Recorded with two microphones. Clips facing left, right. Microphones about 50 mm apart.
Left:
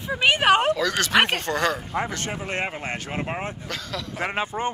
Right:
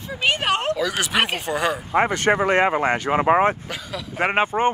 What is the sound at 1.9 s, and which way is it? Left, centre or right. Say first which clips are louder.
Speech: right 8 dB; right.